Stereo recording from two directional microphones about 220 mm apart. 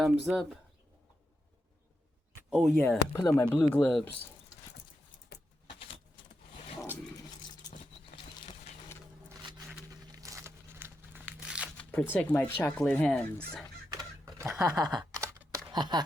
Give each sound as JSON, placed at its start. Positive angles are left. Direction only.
{"t": 0.0, "sound": "speech", "side_deg": 0}
{"t": 2.3, "sound": "speech", "side_deg": 0}
{"t": 9.9, "sound": "crumpling", "side_deg": -15}
{"t": 11.8, "sound": "music", "side_deg": 5}
{"t": 12.1, "sound": "speech", "side_deg": 10}
{"t": 13.9, "sound": "a sound", "side_deg": -15}